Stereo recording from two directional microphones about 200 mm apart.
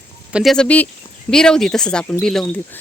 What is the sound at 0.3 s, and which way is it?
Speech, centre (ahead or behind).